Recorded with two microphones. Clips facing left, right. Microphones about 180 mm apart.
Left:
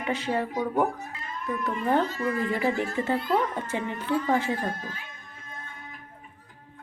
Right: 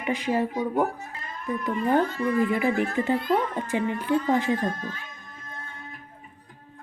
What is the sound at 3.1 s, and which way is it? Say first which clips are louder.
Speech: right 2 dB; 15° right (ahead or behind).